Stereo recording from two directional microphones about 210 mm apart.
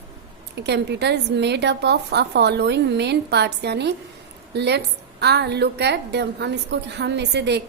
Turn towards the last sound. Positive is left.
turn(degrees=-55)  # may be behind; listen again after turning